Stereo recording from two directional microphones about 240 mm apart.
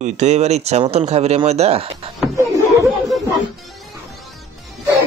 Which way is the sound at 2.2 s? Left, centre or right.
Centre.